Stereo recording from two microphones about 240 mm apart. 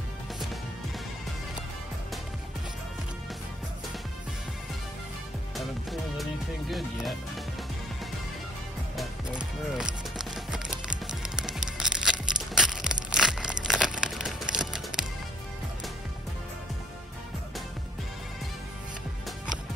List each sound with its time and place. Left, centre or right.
5.6 s music: centre
6.7 s speech: centre
8.9 s music: centre
12.5 s crumpling: centre